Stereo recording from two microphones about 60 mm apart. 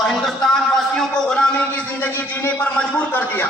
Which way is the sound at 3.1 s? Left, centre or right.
Left.